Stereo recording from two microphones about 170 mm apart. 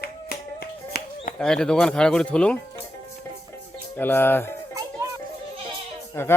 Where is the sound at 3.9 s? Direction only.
10° left (ahead or behind).